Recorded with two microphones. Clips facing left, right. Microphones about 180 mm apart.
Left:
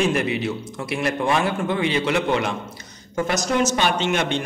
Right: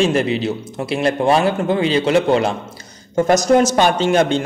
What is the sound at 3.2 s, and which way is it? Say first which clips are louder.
A man's voice: right 8 dB; 45° right (ahead or behind).